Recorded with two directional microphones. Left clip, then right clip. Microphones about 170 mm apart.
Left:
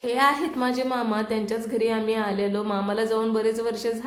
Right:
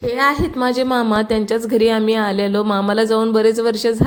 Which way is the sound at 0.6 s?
45° right (ahead or behind).